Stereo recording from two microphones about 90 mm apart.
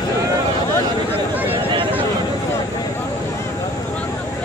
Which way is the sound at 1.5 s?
70° right (ahead or behind).